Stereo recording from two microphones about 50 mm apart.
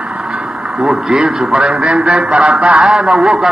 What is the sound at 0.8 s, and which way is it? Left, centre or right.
A man's voice, centre.